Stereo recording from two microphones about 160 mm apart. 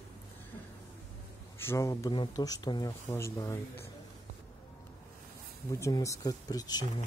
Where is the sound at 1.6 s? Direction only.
15° left (ahead or behind).